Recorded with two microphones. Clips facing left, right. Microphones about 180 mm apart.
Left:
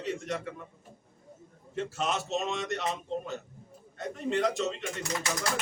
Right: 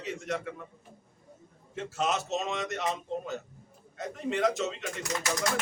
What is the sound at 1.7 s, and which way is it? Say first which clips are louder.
A man's voice: right 1 dB; centre (ahead or behind).